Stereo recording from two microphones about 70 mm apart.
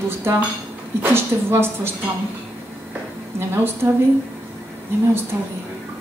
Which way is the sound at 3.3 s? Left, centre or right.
Right.